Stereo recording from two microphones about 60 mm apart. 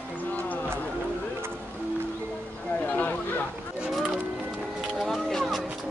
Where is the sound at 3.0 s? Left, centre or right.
Left.